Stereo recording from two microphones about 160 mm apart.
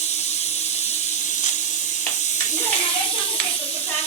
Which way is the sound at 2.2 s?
50° left (ahead or behind).